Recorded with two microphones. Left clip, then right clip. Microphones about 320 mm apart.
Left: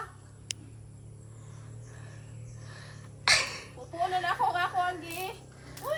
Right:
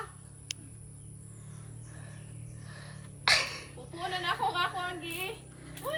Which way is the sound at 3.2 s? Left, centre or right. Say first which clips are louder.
Left 1 dB; centre.